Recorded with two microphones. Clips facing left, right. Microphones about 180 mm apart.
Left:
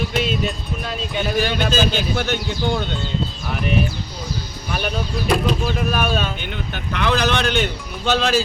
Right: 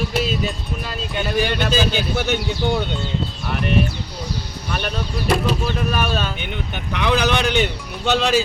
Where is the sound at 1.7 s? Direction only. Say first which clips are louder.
Even; 10° right (ahead or behind).